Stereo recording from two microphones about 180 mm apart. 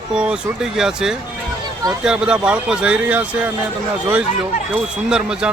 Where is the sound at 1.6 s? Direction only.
20° right (ahead or behind).